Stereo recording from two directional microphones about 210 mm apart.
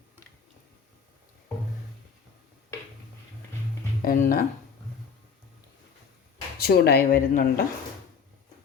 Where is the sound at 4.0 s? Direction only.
40° left (ahead or behind).